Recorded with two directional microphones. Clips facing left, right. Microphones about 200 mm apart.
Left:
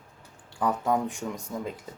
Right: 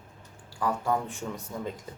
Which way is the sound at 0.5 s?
20° left (ahead or behind).